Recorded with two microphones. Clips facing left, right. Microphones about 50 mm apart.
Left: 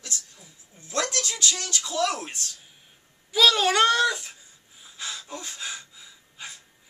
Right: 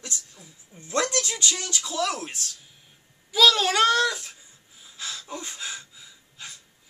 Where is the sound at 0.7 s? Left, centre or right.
Right.